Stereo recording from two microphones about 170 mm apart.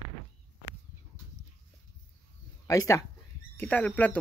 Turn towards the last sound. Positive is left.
turn(degrees=10)  # may be behind; listen again after turning